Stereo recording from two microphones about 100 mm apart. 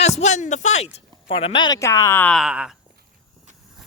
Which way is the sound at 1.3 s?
60° left (ahead or behind).